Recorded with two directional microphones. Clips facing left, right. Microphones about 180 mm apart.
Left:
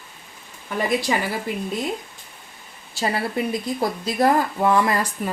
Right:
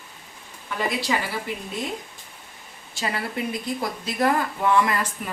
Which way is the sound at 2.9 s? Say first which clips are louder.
Left 5 dB; 35° left (ahead or behind).